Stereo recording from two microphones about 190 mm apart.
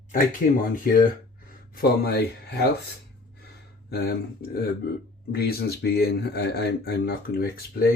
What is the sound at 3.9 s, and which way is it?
Speech, 55° left (ahead or behind).